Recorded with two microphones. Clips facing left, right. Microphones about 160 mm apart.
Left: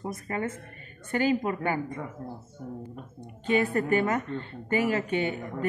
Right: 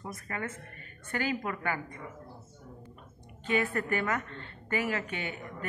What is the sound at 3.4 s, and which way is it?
A woman's voice, 25° left (ahead or behind).